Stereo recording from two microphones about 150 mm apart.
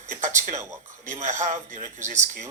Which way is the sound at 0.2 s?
55° right (ahead or behind).